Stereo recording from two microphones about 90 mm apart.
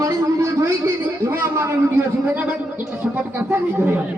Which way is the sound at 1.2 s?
25° right (ahead or behind).